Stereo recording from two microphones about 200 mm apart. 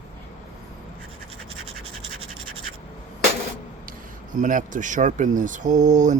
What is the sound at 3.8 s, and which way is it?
Speech, 45° right (ahead or behind).